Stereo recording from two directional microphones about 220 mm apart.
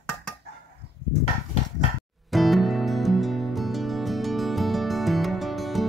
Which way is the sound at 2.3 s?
Centre (ahead or behind).